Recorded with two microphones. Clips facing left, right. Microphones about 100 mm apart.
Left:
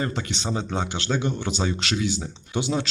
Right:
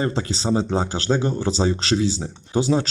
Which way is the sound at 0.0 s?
30° right (ahead or behind).